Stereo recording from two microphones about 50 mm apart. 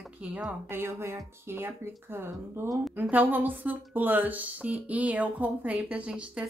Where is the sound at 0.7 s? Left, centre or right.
Right.